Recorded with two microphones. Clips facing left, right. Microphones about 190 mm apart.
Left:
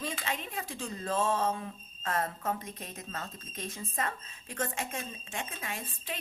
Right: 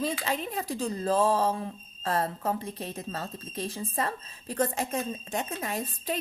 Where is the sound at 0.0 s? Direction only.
35° right (ahead or behind).